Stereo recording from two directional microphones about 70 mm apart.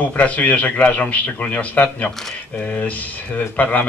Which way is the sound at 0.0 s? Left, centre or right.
Left.